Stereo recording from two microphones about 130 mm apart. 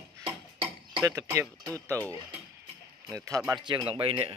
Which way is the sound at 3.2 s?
25° right (ahead or behind).